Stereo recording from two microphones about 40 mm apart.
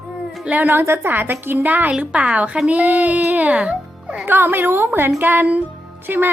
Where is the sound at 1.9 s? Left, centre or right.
Right.